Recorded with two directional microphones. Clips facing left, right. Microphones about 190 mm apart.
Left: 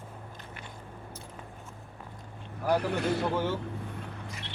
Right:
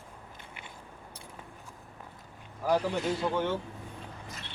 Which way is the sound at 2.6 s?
65° left (ahead or behind).